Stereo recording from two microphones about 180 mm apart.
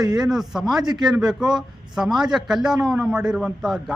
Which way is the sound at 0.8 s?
25° right (ahead or behind).